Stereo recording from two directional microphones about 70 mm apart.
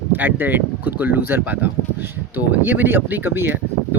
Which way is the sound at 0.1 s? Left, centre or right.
Right.